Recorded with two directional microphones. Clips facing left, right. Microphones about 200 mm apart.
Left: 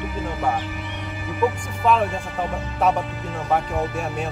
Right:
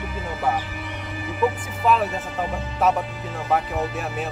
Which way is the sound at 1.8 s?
5° right (ahead or behind).